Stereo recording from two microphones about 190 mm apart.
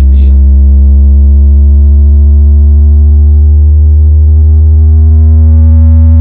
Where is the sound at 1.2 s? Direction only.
30° left (ahead or behind).